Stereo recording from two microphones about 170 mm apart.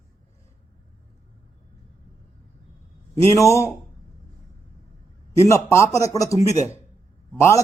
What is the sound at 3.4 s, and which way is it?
Speech, 20° left (ahead or behind).